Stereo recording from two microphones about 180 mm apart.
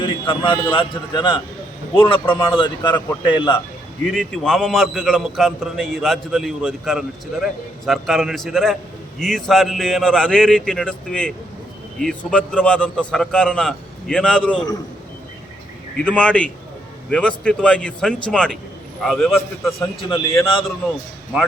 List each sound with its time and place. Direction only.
0.0 s a man's voice: 30° left (ahead or behind)
4.0 s a man's voice: centre (ahead or behind)
16.0 s a man's voice: 5° left (ahead or behind)
20.0 s a man's voice: 30° left (ahead or behind)